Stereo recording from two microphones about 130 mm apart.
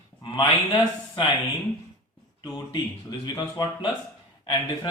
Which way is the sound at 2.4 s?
30° left (ahead or behind).